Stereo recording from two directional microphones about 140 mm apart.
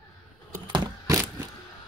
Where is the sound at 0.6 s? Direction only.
35° right (ahead or behind).